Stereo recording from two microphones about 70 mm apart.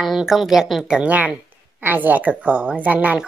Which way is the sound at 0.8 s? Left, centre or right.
Centre.